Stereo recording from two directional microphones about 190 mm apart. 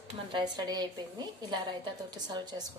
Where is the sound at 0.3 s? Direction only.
25° right (ahead or behind).